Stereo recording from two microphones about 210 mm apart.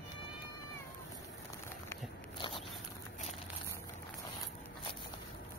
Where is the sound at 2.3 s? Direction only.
25° left (ahead or behind).